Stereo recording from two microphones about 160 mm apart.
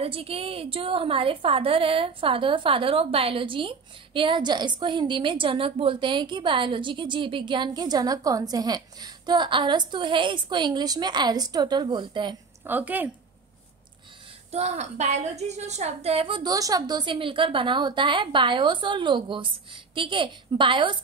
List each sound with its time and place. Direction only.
0.0 s a woman's voice: 35° right (ahead or behind)
12.6 s a woman's voice: 10° right (ahead or behind)
14.5 s a woman's voice: 40° right (ahead or behind)